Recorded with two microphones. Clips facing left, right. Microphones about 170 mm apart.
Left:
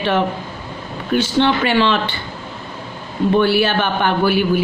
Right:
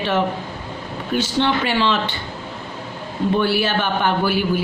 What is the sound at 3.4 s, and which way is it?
Speech, 65° left (ahead or behind).